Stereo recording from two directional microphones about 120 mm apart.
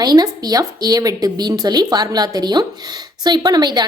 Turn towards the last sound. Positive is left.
turn(degrees=-35)  # may be behind; listen again after turning